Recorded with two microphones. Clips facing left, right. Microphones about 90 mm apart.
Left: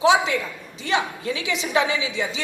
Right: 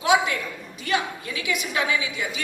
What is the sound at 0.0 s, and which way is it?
A woman's voice, 25° left (ahead or behind).